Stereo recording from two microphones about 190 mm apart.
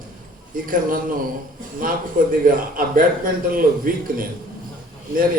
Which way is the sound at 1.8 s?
45° right (ahead or behind).